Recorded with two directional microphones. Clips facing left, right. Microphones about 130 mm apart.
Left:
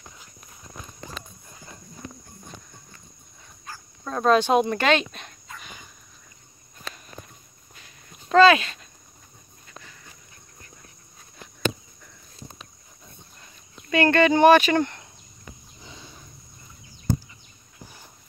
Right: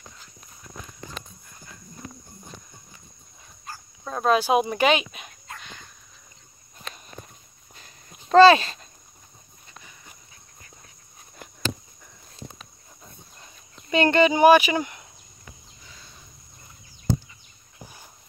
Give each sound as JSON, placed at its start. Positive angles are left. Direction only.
{"t": 4.0, "sound": "speech", "side_deg": -5}
{"t": 5.6, "sound": "cricket", "side_deg": 5}
{"t": 7.7, "sound": "dog", "side_deg": -35}
{"t": 9.7, "sound": "dog", "side_deg": -15}
{"t": 13.8, "sound": "speech", "side_deg": -15}